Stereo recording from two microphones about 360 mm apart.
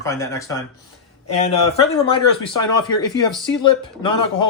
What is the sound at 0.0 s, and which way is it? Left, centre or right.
Speech, centre.